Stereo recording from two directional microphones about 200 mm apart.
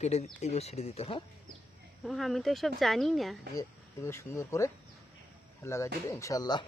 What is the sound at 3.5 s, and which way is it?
Speech, 15° left (ahead or behind).